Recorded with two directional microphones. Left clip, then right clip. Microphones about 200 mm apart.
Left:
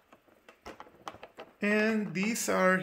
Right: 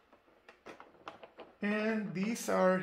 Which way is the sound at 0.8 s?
55° left (ahead or behind).